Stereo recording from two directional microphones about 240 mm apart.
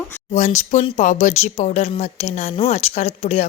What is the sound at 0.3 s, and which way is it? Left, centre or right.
Speech, left.